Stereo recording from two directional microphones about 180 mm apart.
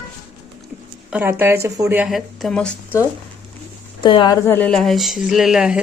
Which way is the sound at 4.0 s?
25° left (ahead or behind).